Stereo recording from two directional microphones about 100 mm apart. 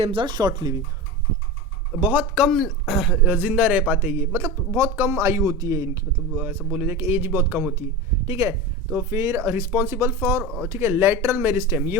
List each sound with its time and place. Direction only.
0.0 s speech: 60° right (ahead or behind); by 0.8 s 45° right (ahead or behind)
2.0 s a man's voice: 15° right (ahead or behind)
2.5 s speech: centre (ahead or behind)
3.2 s a man's voice: 15° right (ahead or behind); by 6.1 s 35° right (ahead or behind)
6.3 s a man's voice: 20° right (ahead or behind)